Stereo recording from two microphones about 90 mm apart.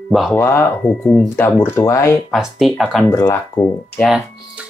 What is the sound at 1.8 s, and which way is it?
Mantra, 35° left (ahead or behind).